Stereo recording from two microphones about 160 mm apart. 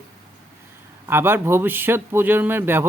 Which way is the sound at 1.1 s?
15° right (ahead or behind).